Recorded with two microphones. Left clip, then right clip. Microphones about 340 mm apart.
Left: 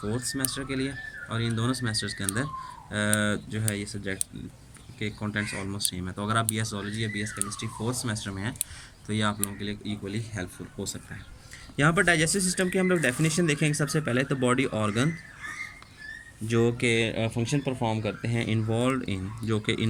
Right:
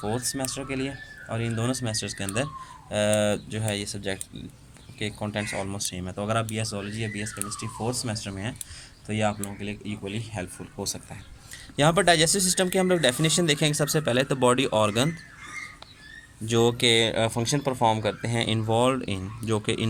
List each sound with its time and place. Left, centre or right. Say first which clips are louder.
0.2 s speech: right 1 dB; centre
11.8 s speech: right 3 dB; centre
16.5 s speech: right 4 dB; centre
17.6 s speech: right 4 dB; right
17.8 s speech: right 6 dB; centre